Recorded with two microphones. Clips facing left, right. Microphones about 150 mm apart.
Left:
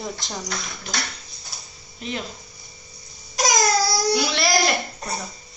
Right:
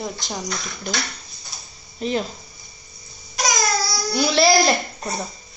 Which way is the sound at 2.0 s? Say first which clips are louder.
Right 7 dB; 35° right (ahead or behind).